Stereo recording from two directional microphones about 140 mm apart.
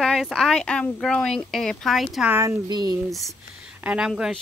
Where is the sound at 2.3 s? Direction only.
20° right (ahead or behind).